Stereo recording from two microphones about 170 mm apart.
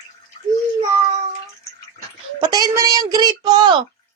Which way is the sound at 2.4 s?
25° right (ahead or behind).